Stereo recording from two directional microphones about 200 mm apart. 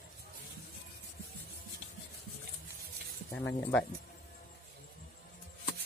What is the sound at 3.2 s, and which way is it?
Speech, 10° left (ahead or behind).